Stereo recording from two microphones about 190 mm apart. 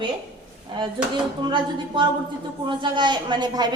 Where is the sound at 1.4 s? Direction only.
25° right (ahead or behind).